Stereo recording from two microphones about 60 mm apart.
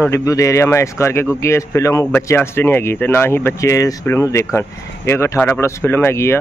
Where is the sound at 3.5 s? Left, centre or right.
Left.